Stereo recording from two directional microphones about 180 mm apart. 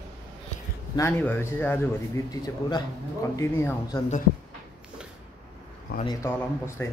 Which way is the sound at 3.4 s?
15° left (ahead or behind).